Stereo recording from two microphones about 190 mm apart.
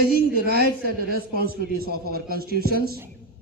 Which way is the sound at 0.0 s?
55° right (ahead or behind).